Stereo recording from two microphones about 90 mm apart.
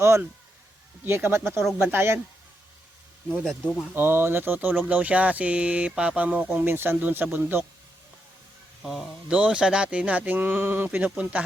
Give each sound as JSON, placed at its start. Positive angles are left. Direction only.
{"t": 0.0, "sound": "speech", "side_deg": -30}
{"t": 3.4, "sound": "speech", "side_deg": 5}
{"t": 3.9, "sound": "speech", "side_deg": -25}
{"t": 8.8, "sound": "speech", "side_deg": 0}